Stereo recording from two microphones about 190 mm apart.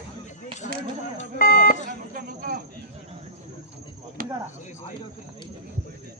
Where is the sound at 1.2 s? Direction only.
50° left (ahead or behind).